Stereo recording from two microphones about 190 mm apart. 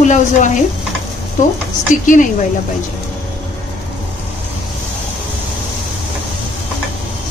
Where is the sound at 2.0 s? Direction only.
45° left (ahead or behind).